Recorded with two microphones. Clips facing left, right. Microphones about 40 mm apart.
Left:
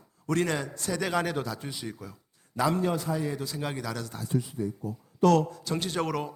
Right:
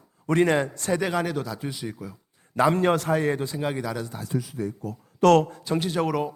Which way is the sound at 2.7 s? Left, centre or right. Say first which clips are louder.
Right 6 dB; right.